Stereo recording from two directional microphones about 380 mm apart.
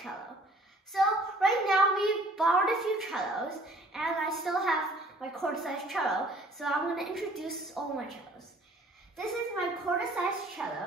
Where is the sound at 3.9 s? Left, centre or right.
Centre.